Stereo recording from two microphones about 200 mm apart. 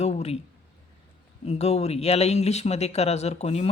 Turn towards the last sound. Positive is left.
turn(degrees=30)  # may be behind; listen again after turning